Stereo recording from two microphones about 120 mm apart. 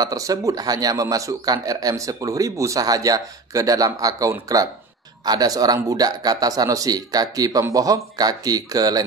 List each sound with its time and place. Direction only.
0.0 s a man's voice: 30° right (ahead or behind)